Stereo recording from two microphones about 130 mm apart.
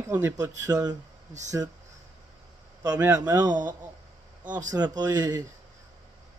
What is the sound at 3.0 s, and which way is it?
Speech, 20° right (ahead or behind).